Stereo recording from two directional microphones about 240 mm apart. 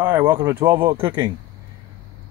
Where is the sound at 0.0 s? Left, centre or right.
Centre.